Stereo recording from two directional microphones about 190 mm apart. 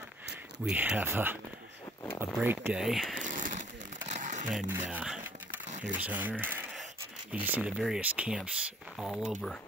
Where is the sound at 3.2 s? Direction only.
45° right (ahead or behind).